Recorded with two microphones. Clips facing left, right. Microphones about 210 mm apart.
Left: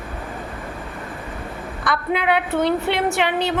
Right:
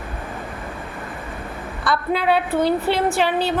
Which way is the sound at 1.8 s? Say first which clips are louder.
Right 1 dB; 20° left (ahead or behind).